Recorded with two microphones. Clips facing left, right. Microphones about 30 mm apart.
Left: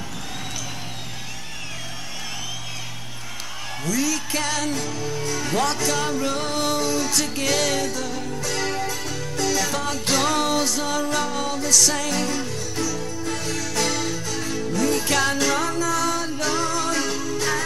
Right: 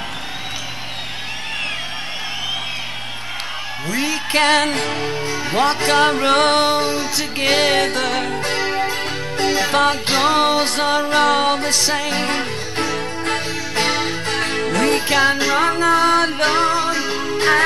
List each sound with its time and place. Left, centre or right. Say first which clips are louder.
3.8 s music: right 2 dB; right
5.2 s music: right 4 dB; right
6.6 s music: right 5 dB; right
7.8 s music: right 8 dB; right
8.4 s music: right 6 dB; right
11.2 s music: right 9 dB; right
13.5 s music: right 4 dB; right
15.0 s music: right 5 dB; right
16.9 s music: right 3 dB; right
17.2 s music: right 8 dB; right